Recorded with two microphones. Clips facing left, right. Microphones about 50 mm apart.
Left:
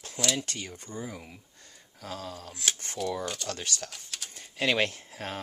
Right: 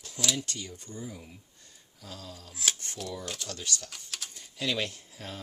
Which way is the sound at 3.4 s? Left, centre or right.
Left.